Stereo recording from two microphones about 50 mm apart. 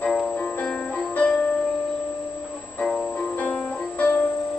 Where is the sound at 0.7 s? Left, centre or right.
Left.